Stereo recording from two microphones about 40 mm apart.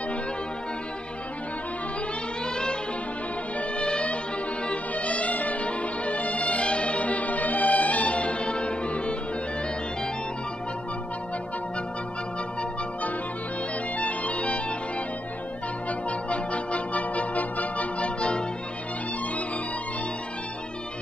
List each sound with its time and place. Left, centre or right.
2.5 s music: centre
13.9 s music: left
15.9 s music: left